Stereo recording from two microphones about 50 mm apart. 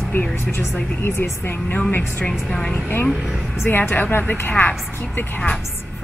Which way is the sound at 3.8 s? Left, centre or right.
Left.